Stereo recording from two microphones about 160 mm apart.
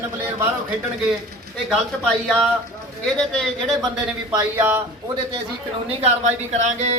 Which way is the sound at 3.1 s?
Centre (ahead or behind).